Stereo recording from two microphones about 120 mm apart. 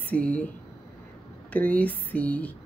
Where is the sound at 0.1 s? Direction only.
10° left (ahead or behind).